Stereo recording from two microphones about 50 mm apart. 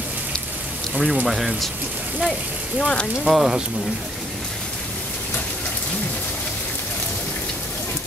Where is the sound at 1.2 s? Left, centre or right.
Centre.